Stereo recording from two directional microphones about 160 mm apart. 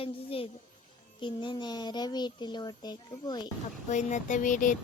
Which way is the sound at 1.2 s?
30° left (ahead or behind).